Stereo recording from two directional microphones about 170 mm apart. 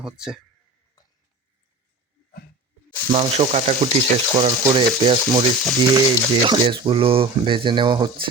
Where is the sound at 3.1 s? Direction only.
35° right (ahead or behind).